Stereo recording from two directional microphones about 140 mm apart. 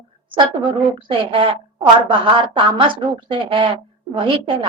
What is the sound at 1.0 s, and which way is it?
A woman's voice, 35° right (ahead or behind).